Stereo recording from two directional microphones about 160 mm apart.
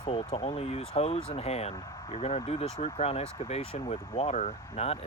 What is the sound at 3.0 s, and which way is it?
Speech, 40° left (ahead or behind).